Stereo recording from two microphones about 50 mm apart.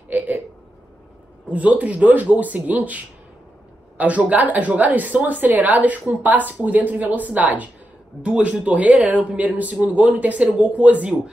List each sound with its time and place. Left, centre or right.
1.5 s a woman's voice: right
4.0 s a woman's voice: right